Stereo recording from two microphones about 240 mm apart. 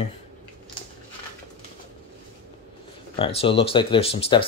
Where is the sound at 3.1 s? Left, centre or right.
Left.